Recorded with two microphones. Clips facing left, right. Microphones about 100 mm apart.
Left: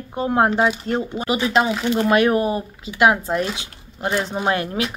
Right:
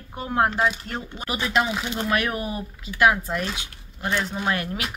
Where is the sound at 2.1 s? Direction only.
30° left (ahead or behind).